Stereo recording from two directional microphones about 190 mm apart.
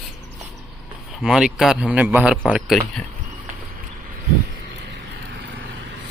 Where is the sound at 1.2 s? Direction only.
5° right (ahead or behind).